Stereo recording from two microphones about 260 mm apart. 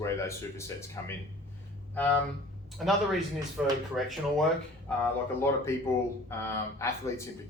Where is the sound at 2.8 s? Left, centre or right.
Centre.